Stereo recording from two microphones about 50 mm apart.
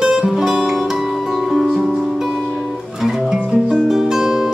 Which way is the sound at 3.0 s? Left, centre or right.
Centre.